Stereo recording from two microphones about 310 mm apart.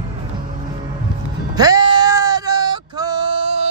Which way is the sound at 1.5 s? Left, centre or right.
Centre.